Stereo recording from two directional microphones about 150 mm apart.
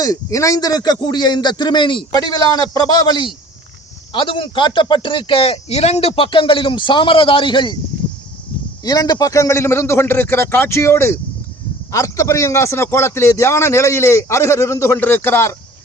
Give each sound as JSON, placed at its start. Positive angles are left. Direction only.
{"t": 0.0, "sound": "a man's voice", "side_deg": 25}
{"t": 8.8, "sound": "a man's voice", "side_deg": 25}